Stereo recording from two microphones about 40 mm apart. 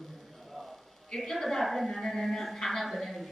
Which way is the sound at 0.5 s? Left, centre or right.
Centre.